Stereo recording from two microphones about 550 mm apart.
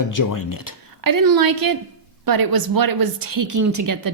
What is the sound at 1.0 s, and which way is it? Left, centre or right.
A woman's voice, right.